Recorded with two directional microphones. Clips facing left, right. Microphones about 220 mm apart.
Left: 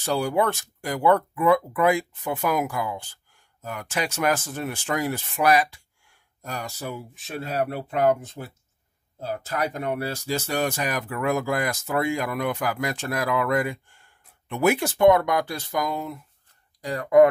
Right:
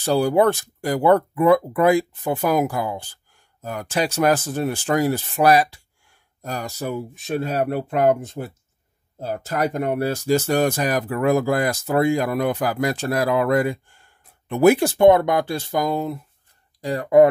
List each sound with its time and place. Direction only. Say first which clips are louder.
0.0 s speech: right 6 dB; 35° right (ahead or behind)